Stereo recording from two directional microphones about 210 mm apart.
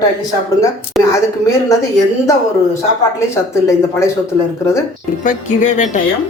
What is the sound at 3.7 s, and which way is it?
Speech, 15° left (ahead or behind).